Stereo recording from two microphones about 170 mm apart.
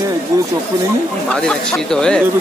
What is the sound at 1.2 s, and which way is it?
Speech, 5° left (ahead or behind).